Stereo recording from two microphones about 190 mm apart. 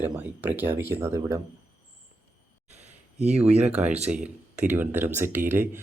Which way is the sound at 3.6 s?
5° right (ahead or behind).